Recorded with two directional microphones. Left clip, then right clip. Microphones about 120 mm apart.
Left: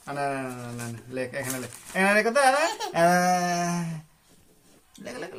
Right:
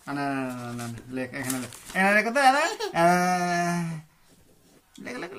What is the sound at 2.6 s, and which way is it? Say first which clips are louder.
Speech: left 1 dB; centre (ahead or behind).